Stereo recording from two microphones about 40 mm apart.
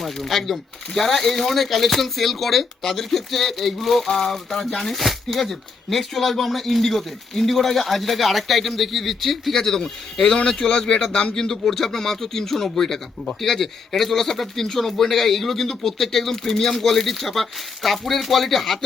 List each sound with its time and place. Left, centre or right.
0.0 s a man's voice: centre